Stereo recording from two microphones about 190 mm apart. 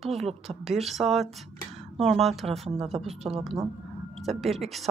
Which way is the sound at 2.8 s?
30° right (ahead or behind).